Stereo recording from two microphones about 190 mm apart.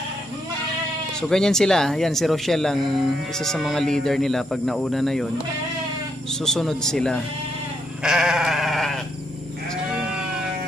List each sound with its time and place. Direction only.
1.3 s speech: 5° left (ahead or behind)
6.4 s speech: centre (ahead or behind)
8.0 s sheep: 5° right (ahead or behind)